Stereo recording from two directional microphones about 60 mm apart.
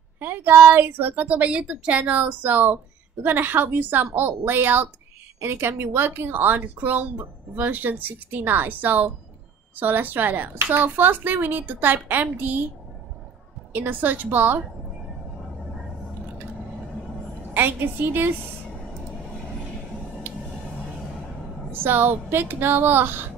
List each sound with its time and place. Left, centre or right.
0.2 s a woman's voice: right
13.7 s a woman's voice: right
17.6 s a woman's voice: right
21.7 s a woman's voice: right